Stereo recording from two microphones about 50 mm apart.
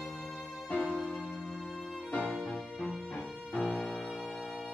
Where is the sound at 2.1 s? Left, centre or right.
Left.